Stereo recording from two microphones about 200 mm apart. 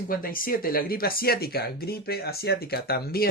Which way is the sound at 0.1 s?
45° left (ahead or behind).